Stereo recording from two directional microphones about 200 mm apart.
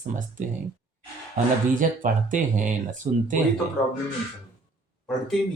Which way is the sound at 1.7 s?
40° right (ahead or behind).